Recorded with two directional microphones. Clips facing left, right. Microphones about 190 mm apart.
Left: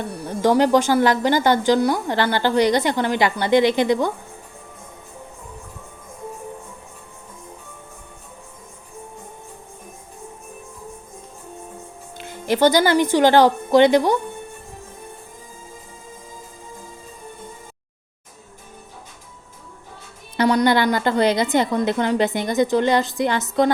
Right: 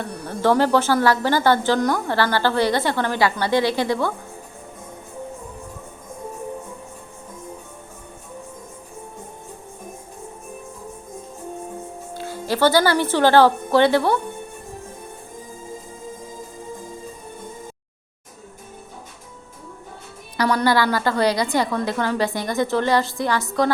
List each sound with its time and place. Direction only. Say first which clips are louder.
0.3 s a woman's voice: left 2 dB; 15° left (ahead or behind)
12.1 s speech: left 3 dB; 20° left (ahead or behind)
20.3 s music: left 3 dB; 25° left (ahead or behind)
20.6 s a woman's voice: left 2 dB; 20° left (ahead or behind)